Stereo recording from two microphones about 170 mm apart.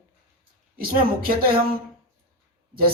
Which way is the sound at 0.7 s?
60° right (ahead or behind).